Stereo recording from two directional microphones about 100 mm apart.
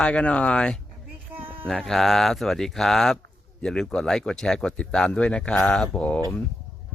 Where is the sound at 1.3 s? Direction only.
15° right (ahead or behind).